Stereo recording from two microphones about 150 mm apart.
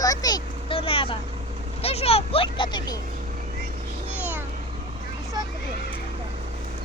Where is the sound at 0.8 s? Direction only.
40° left (ahead or behind).